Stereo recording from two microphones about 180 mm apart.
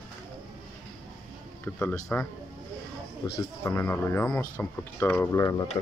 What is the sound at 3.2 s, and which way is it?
Speech, 25° left (ahead or behind).